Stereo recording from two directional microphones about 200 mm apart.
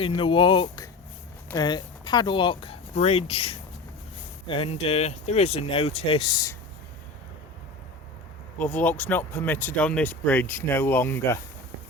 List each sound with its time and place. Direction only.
0.0 s speech: 25° left (ahead or behind)
8.5 s speech: 10° left (ahead or behind)